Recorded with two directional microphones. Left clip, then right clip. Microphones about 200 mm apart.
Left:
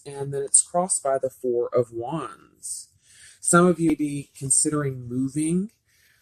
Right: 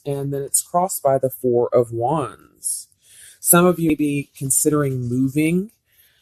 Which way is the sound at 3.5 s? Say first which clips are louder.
Right 3 dB; 40° right (ahead or behind).